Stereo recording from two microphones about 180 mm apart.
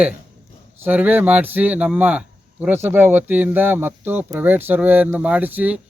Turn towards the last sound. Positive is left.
turn(degrees=-10)  # may be behind; listen again after turning